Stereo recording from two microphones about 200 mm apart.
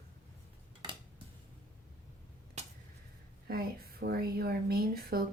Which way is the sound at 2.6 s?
35° right (ahead or behind).